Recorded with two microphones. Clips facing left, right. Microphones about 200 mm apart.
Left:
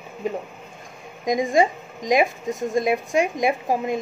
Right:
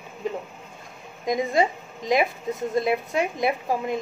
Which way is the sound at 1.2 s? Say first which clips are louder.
Left 3 dB; 15° left (ahead or behind).